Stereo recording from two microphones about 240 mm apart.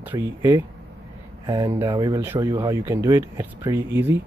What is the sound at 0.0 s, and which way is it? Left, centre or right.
Speech, centre.